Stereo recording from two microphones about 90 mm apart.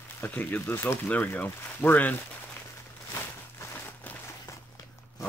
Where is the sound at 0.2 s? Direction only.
20° left (ahead or behind).